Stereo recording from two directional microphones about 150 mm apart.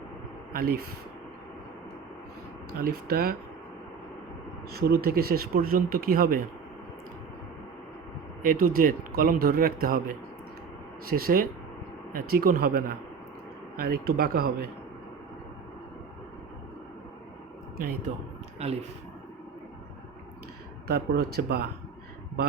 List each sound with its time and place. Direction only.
0.5 s speech: 85° right
2.8 s speech: 90° right
4.7 s speech: 90° right
8.4 s speech: 70° right (ahead or behind); by 14.7 s 90° right
18.6 s speech: 45° right (ahead or behind)
20.8 s speech: 90° right